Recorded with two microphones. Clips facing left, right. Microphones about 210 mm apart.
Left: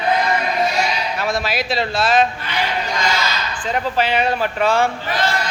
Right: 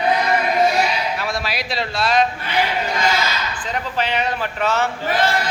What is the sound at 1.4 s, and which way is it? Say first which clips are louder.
Speech: left 4 dB; centre (ahead or behind).